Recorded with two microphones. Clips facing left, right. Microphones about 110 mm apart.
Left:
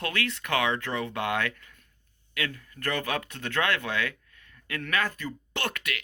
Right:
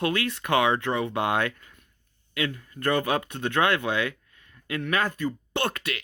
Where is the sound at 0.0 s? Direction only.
25° right (ahead or behind).